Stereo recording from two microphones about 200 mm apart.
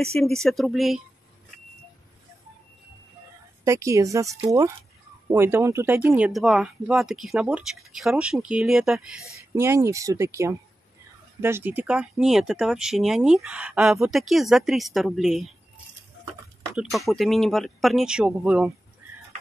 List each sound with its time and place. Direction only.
0.0 s speech: 5° left (ahead or behind)
3.6 s speech: 15° right (ahead or behind)
9.6 s speech: 15° right (ahead or behind)
16.7 s speech: centre (ahead or behind)